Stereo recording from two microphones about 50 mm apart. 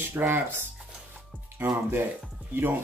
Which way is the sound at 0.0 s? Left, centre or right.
Right.